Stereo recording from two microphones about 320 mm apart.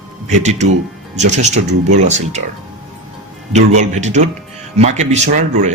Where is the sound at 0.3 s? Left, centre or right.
Right.